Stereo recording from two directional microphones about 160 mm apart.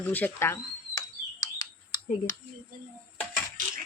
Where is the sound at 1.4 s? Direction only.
25° left (ahead or behind).